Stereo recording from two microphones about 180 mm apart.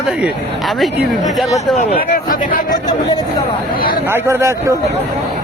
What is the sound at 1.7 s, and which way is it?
Speech, 50° left (ahead or behind).